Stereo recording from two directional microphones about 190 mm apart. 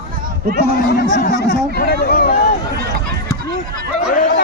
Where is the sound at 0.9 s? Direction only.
45° left (ahead or behind).